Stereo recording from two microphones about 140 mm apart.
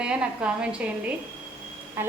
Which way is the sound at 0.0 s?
5° right (ahead or behind).